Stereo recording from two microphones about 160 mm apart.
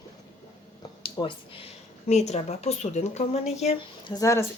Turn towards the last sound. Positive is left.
turn(degrees=20)  # may be behind; listen again after turning